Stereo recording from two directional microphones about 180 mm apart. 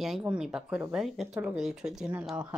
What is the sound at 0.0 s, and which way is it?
Speech, 5° right (ahead or behind).